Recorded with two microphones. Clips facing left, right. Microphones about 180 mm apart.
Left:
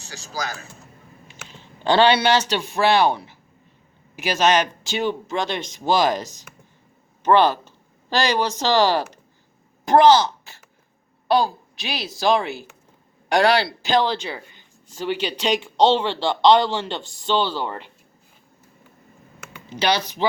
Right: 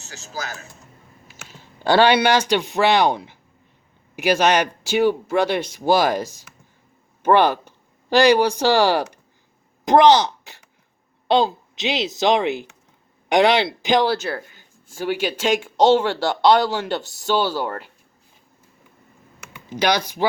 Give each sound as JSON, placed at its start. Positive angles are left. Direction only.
{"t": 0.1, "sound": "speech", "side_deg": 35}
{"t": 1.3, "sound": "a woman's voice", "side_deg": -10}
{"t": 19.7, "sound": "speech", "side_deg": -10}